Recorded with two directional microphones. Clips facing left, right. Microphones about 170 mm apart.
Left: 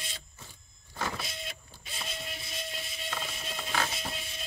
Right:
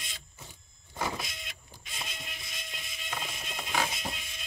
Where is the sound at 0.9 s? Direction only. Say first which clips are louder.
Right 1 dB; 20° right (ahead or behind).